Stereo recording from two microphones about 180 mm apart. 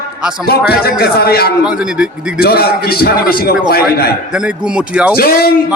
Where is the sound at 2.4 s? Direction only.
60° left (ahead or behind).